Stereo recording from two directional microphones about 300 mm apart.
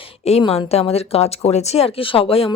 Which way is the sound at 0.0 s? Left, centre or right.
Centre.